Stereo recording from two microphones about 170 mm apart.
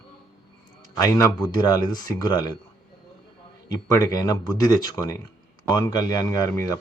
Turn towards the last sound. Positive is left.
turn(degrees=15)  # may be behind; listen again after turning